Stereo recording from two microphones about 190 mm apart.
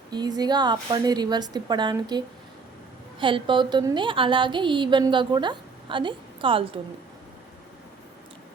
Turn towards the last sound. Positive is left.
turn(degrees=-30)  # may be behind; listen again after turning